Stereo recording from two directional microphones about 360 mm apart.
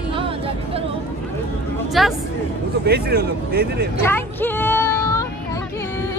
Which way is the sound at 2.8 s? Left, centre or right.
Right.